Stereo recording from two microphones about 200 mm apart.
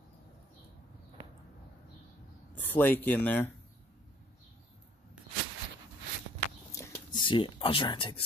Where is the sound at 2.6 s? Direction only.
10° left (ahead or behind).